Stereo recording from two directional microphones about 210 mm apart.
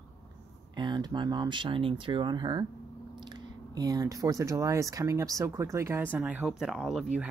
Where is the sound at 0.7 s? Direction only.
20° right (ahead or behind).